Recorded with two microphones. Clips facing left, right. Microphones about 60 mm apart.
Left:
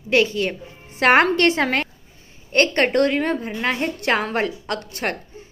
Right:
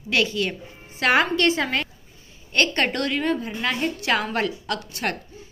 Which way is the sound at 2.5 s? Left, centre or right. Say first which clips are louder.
Left 5 dB; left.